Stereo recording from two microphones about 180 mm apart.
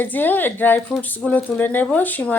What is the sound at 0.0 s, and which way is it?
Speech, 10° left (ahead or behind).